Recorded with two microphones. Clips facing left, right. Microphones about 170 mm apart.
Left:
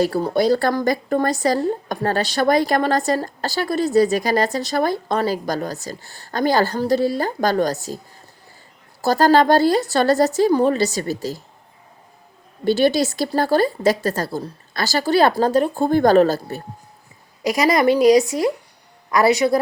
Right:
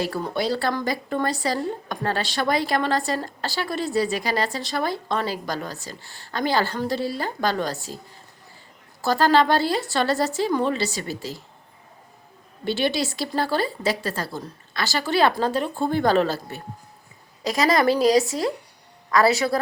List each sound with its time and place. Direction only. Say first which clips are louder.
0.0 s a woman's voice: left 7 dB; 40° left (ahead or behind)
9.0 s a woman's voice: left 4 dB; 40° left (ahead or behind)
12.6 s a woman's voice: left 7 dB; 40° left (ahead or behind)
17.4 s speech: left 3 dB; 20° left (ahead or behind)
19.1 s speech: left 3 dB; 20° left (ahead or behind)